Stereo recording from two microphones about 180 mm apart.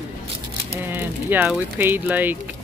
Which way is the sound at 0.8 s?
10° right (ahead or behind).